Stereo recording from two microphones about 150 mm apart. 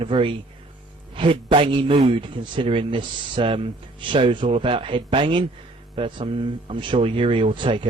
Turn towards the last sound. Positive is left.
turn(degrees=-35)  # may be behind; listen again after turning